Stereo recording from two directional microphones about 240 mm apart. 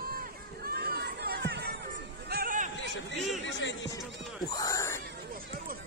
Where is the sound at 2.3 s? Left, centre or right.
Right.